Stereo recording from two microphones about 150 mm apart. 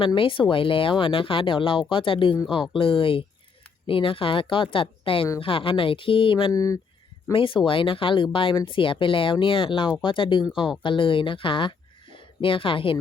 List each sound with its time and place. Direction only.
0.0 s speech: 35° left (ahead or behind)
6.5 s speech: 20° left (ahead or behind)
7.3 s speech: 35° left (ahead or behind)